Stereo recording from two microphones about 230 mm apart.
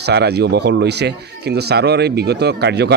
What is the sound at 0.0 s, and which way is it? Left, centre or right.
Speech, right.